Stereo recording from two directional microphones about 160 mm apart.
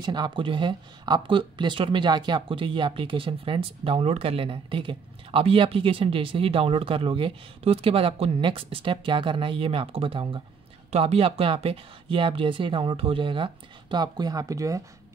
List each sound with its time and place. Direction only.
0.0 s speech: 30° right (ahead or behind)